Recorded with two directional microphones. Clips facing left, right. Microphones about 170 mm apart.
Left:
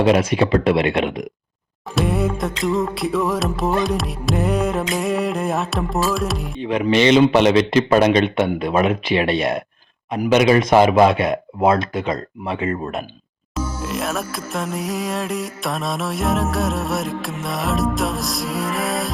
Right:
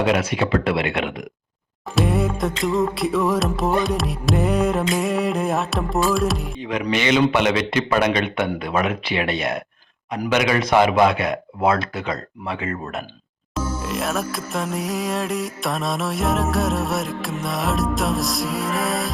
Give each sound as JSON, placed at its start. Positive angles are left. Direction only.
{"t": 0.0, "sound": "a man's voice", "side_deg": 30}
{"t": 2.0, "sound": "music", "side_deg": 0}
{"t": 6.7, "sound": "a man's voice", "side_deg": 30}
{"t": 13.8, "sound": "music", "side_deg": 0}